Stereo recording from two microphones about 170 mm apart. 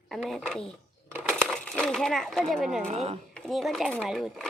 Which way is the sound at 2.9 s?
40° right (ahead or behind).